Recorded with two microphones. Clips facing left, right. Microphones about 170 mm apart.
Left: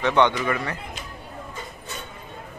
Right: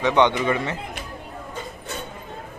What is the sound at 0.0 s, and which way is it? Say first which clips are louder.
Speech: right 1 dB; 15° right (ahead or behind).